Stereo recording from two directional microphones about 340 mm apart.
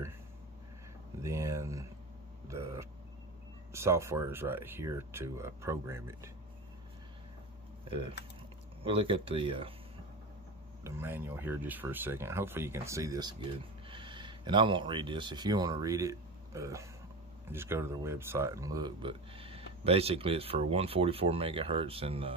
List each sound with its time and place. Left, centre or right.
1.2 s a sound: centre
3.7 s speech: centre
8.8 s speech: centre
10.8 s speech: centre